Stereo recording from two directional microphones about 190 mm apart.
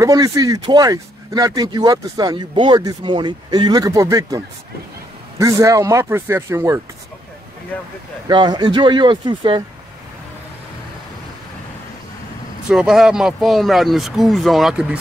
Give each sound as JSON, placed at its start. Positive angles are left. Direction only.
{"t": 0.0, "sound": "speech", "side_deg": -15}
{"t": 5.4, "sound": "speech", "side_deg": -15}
{"t": 8.3, "sound": "speech", "side_deg": -25}
{"t": 12.6, "sound": "speech", "side_deg": 0}